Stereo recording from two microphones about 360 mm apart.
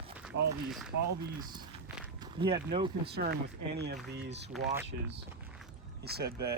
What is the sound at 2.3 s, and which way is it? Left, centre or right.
Speech, centre.